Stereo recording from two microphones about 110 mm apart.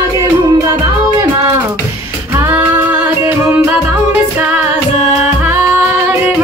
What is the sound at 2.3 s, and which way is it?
Music, 20° right (ahead or behind).